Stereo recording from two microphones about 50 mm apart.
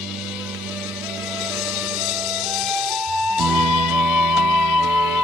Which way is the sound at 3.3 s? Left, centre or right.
Centre.